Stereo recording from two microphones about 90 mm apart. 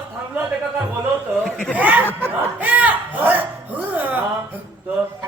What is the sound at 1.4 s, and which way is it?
Speech, 10° left (ahead or behind).